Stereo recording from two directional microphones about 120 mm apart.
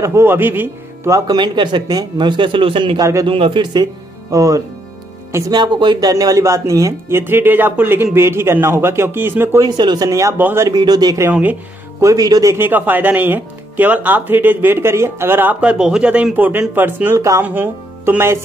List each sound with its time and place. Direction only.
0.0 s speech: 20° right (ahead or behind); by 3.0 s 50° right (ahead or behind)
3.0 s speech: 25° right (ahead or behind)
3.3 s a man's voice: 45° right (ahead or behind)
4.3 s speech: 30° right (ahead or behind)
5.5 s speech: 40° right (ahead or behind); by 9.7 s 20° right (ahead or behind)
9.7 s speech: 35° right (ahead or behind); by 10.7 s 20° right (ahead or behind)
10.7 s speech: 35° right (ahead or behind)
12.5 s speech: 15° right (ahead or behind)